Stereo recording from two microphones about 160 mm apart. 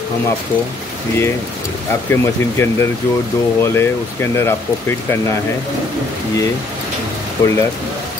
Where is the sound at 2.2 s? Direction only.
15° left (ahead or behind).